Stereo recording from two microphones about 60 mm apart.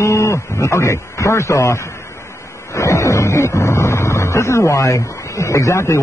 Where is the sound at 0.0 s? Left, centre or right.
Left.